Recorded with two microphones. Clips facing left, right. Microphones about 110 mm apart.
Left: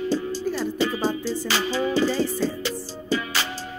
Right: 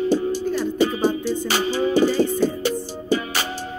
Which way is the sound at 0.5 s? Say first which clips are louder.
Right 4 dB; 20° right (ahead or behind).